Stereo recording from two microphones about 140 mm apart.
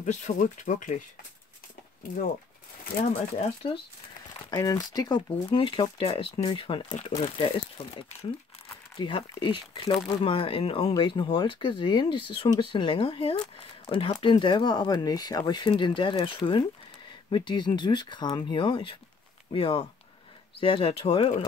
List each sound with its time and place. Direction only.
0.0 s speech: 60° left (ahead or behind)
3.0 s speech: 50° left (ahead or behind)
4.5 s speech: 25° left (ahead or behind)